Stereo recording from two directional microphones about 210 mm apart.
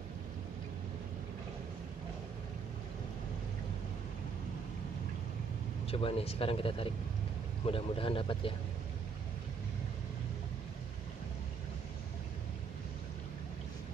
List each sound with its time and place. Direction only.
5.9 s speech: 25° left (ahead or behind)